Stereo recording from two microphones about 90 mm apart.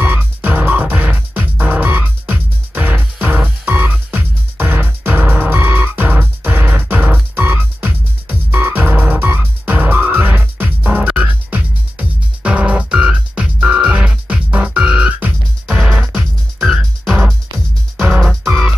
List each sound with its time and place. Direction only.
0.0 s music: 20° right (ahead or behind); by 18.3 s 5° right (ahead or behind)